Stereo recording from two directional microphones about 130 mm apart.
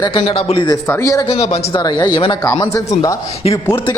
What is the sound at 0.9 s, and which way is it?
Speech, 20° left (ahead or behind).